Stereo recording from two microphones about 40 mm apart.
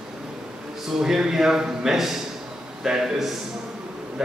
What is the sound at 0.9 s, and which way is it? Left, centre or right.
A man's voice, centre.